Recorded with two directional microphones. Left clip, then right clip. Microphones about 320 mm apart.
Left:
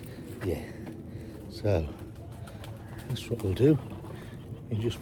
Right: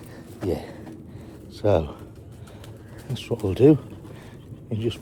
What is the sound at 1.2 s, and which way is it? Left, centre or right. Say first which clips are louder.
Pigeon: right 8 dB; right.